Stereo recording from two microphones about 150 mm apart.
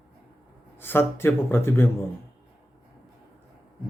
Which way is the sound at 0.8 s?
15° left (ahead or behind).